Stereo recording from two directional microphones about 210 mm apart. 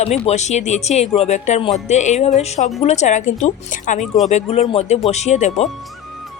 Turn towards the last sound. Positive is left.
turn(degrees=30)  # may be behind; listen again after turning